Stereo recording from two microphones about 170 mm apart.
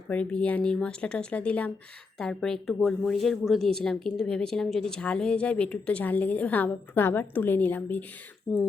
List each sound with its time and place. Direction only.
0.1 s speech: 5° left (ahead or behind)
8.5 s speech: centre (ahead or behind)